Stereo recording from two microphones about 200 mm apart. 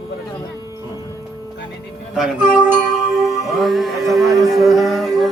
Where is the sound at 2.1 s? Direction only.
5° right (ahead or behind).